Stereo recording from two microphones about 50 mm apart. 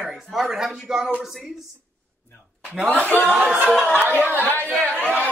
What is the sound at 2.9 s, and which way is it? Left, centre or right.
Speech, left.